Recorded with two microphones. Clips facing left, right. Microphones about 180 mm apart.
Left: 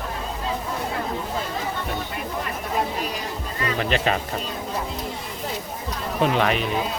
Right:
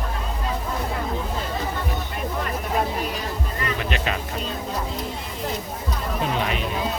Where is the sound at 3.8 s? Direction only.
35° left (ahead or behind).